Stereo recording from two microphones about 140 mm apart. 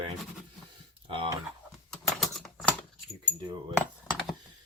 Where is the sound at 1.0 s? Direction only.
40° right (ahead or behind).